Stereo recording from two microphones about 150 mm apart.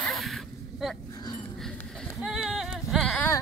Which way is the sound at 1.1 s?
30° left (ahead or behind).